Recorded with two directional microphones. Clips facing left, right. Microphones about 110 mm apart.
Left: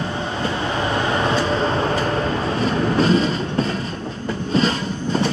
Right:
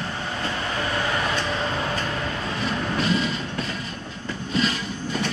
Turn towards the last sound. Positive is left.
turn(degrees=35)  # may be behind; listen again after turning